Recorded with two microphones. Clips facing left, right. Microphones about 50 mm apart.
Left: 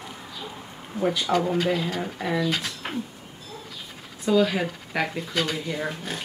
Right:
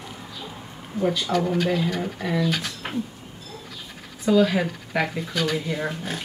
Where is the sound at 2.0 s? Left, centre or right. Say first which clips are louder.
Right 1 dB; centre.